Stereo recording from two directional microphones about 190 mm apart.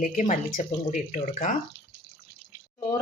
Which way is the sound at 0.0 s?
45° left (ahead or behind).